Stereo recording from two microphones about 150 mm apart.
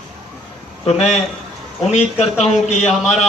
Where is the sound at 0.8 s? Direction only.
45° left (ahead or behind).